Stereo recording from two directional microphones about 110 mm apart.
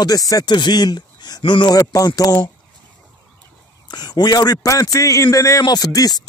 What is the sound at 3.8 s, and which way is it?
Speech, 40° left (ahead or behind).